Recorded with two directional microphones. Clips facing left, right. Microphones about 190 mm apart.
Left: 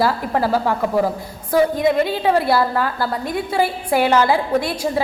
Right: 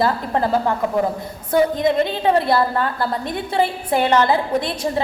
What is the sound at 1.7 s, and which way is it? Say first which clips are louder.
A woman's voice: left 1 dB; 5° left (ahead or behind).